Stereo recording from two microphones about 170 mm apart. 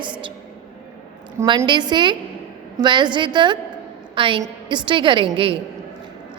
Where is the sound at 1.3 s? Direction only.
25° right (ahead or behind).